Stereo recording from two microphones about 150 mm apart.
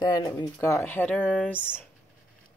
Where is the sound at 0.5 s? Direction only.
15° left (ahead or behind).